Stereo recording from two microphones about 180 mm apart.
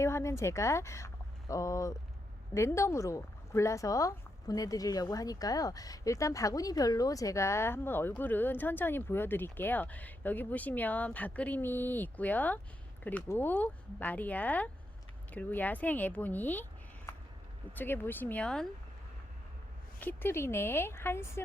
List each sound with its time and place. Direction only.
0.0 s speech: 15° left (ahead or behind)
17.7 s speech: 10° left (ahead or behind)
20.0 s speech: 10° left (ahead or behind)